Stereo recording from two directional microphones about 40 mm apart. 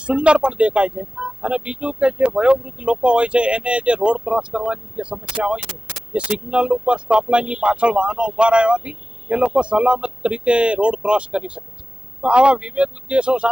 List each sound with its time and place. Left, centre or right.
0.0 s speech: right